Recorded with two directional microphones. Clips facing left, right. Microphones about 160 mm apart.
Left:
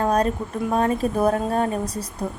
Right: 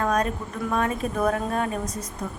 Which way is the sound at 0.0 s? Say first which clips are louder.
Left 3 dB; 30° left (ahead or behind).